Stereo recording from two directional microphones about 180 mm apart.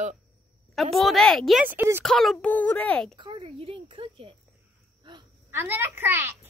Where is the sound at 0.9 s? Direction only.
Centre (ahead or behind).